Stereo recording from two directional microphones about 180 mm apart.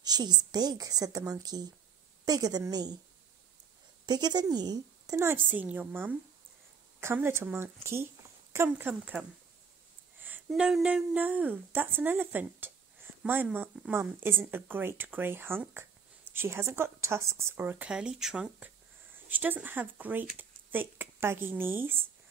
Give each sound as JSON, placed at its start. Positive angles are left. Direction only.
{"t": 0.0, "sound": "a woman's voice", "side_deg": -20}
{"t": 4.0, "sound": "speech", "side_deg": -25}
{"t": 10.2, "sound": "speech", "side_deg": -10}